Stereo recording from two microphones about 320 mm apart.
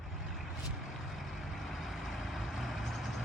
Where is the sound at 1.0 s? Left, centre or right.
Centre.